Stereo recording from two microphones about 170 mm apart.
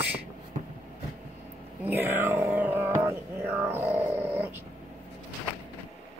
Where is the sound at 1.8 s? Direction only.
10° right (ahead or behind).